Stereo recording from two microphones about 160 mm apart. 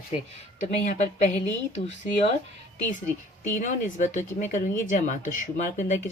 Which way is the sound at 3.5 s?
50° left (ahead or behind).